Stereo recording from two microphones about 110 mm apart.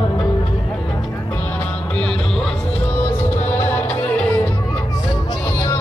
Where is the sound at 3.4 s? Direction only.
20° left (ahead or behind).